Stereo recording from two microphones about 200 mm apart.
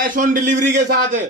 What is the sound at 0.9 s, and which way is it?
Speech, 40° right (ahead or behind).